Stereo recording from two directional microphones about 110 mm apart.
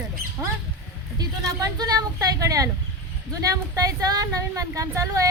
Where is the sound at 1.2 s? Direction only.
35° right (ahead or behind).